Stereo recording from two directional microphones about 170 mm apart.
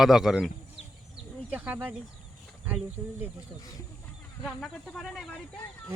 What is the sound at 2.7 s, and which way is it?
Speech, 10° right (ahead or behind).